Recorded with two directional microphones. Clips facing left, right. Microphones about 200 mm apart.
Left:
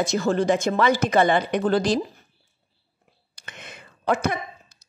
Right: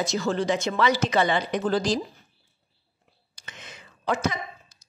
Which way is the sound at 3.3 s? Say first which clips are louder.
Left 3 dB; 60° left (ahead or behind).